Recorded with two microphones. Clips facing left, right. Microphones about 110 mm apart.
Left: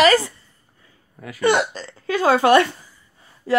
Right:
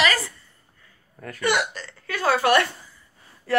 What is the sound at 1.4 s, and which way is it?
Speech, 30° left (ahead or behind).